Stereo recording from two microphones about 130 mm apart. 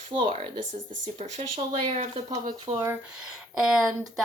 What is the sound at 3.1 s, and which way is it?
Speech, 5° right (ahead or behind).